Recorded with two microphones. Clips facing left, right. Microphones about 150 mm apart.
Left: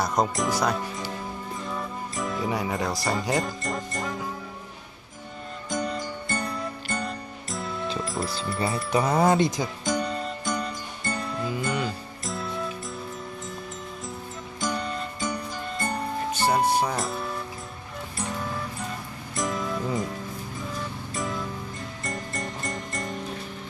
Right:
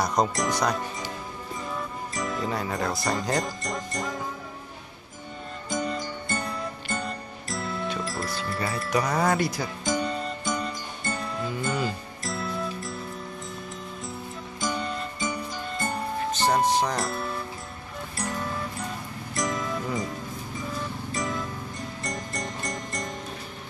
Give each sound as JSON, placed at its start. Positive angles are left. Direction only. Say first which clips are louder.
{"t": 0.0, "sound": "speech", "louder": "even", "side_deg": 0}
{"t": 1.7, "sound": "music", "louder": "even", "side_deg": 0}
{"t": 2.4, "sound": "speech", "louder": "left 2 dB", "side_deg": 15}
{"t": 5.7, "sound": "music", "louder": "even", "side_deg": 0}
{"t": 8.2, "sound": "speech", "louder": "left 1 dB", "side_deg": 0}
{"t": 8.9, "sound": "speech", "louder": "left 3 dB", "side_deg": 25}
{"t": 9.8, "sound": "music", "louder": "right 1 dB", "side_deg": 0}
{"t": 14.6, "sound": "music", "louder": "left 1 dB", "side_deg": 0}
{"t": 21.1, "sound": "music", "louder": "even", "side_deg": 0}